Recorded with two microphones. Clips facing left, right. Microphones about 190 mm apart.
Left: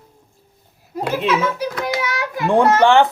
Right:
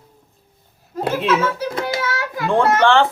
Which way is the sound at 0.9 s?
15° left (ahead or behind).